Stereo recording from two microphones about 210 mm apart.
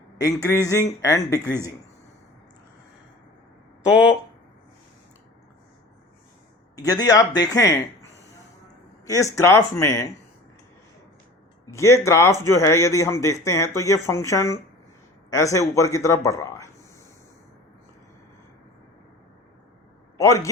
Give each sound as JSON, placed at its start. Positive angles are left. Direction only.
{"t": 0.2, "sound": "a man's voice", "side_deg": 15}
{"t": 6.7, "sound": "a man's voice", "side_deg": 15}
{"t": 9.1, "sound": "a man's voice", "side_deg": 15}
{"t": 11.7, "sound": "a man's voice", "side_deg": 15}
{"t": 20.1, "sound": "a man's voice", "side_deg": 15}